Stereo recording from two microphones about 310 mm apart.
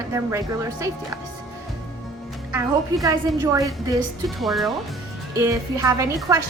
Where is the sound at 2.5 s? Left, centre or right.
Centre.